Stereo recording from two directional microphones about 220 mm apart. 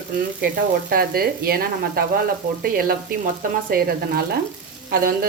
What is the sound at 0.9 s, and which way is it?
Speech, 45° right (ahead or behind).